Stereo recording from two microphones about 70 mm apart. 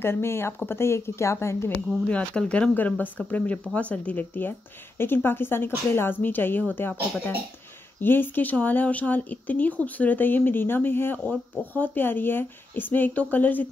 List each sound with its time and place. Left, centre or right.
0.0 s speech: left
2.0 s speech: centre